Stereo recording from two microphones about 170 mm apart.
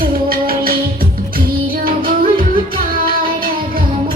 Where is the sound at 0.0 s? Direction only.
60° right (ahead or behind).